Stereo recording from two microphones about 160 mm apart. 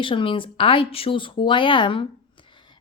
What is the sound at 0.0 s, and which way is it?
Speech, 30° left (ahead or behind).